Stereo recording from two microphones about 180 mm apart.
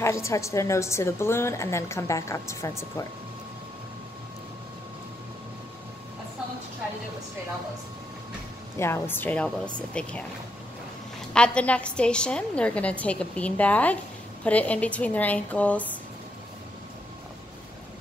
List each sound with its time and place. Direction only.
0.0 s a woman's voice: 15° left (ahead or behind)
8.7 s a woman's voice: 15° left (ahead or behind)
11.3 s a woman's voice: 5° left (ahead or behind)